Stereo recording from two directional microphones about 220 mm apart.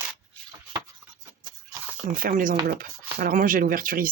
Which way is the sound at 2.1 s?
40° right (ahead or behind).